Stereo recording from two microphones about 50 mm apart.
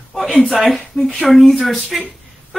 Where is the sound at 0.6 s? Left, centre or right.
Centre.